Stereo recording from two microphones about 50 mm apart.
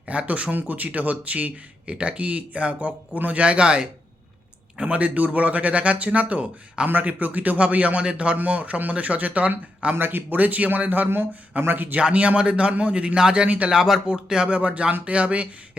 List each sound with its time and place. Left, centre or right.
0.0 s speech: right
6.8 s speech: right
9.9 s a man's voice: right
11.9 s speech: right
13.7 s speech: centre; by 15.4 s right